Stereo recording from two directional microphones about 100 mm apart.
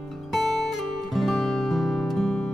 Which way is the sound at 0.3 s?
Centre (ahead or behind).